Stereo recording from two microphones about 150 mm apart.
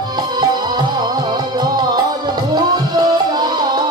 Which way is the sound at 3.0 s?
30° right (ahead or behind).